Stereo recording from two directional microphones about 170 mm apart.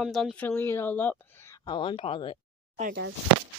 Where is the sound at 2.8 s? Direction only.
55° right (ahead or behind).